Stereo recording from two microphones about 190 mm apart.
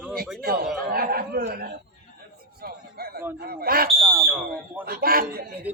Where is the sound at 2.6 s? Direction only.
55° right (ahead or behind).